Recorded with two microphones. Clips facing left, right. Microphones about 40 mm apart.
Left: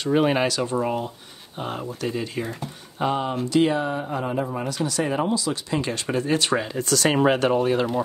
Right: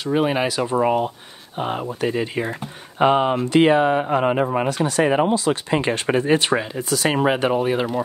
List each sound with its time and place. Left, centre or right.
0.0 s speech: centre
0.5 s speech: right
3.0 s speech: right
4.5 s speech: right
6.6 s speech: centre